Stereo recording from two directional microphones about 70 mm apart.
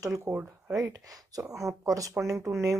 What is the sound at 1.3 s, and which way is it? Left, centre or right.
A woman's voice, right.